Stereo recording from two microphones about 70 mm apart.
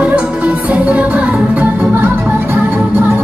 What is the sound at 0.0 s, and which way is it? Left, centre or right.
Music, centre.